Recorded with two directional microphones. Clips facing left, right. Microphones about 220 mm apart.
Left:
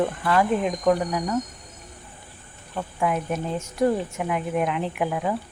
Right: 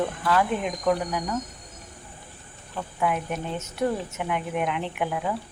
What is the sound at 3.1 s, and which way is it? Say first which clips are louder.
Speech: left 3 dB; 35° left (ahead or behind).